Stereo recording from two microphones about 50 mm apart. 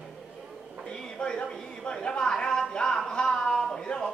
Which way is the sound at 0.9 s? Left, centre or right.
Centre.